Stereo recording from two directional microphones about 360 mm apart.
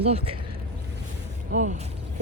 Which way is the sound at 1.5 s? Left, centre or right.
Centre.